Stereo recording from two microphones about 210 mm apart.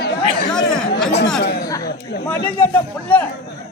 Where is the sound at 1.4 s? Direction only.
55° left (ahead or behind).